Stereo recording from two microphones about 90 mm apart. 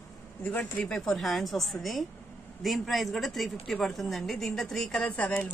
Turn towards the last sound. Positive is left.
turn(degrees=15)  # may be behind; listen again after turning